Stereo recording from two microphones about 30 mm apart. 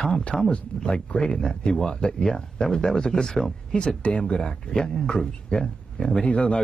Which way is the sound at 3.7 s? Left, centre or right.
Left.